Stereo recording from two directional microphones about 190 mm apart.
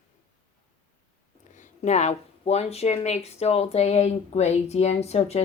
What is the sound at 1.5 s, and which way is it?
Speech, 40° left (ahead or behind).